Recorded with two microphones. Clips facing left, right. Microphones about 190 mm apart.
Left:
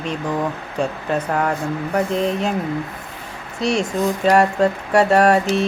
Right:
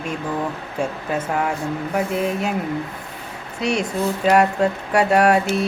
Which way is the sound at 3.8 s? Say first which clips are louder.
Left 2 dB; 15° left (ahead or behind).